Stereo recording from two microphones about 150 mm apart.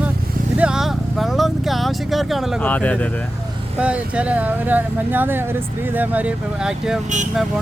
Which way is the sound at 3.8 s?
10° right (ahead or behind).